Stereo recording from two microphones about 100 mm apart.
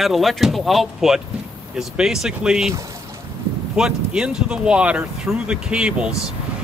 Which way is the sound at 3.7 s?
10° right (ahead or behind).